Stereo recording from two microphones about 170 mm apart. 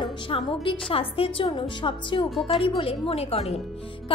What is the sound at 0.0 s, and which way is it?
A woman's voice, 30° left (ahead or behind).